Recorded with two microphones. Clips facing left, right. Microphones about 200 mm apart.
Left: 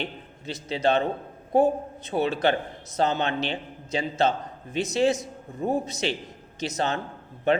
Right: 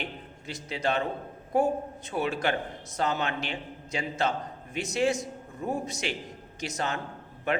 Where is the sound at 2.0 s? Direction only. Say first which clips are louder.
Left 5 dB; 30° left (ahead or behind).